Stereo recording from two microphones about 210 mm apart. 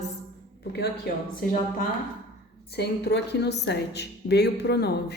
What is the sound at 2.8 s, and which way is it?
Speech, 50° left (ahead or behind).